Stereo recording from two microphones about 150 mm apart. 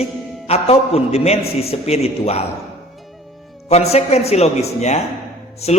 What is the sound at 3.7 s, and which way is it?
A man's voice, 45° left (ahead or behind).